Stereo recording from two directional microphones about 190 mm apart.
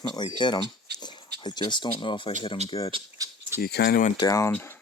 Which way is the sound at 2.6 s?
35° right (ahead or behind).